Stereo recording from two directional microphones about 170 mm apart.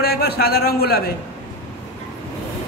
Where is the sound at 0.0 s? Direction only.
65° left (ahead or behind).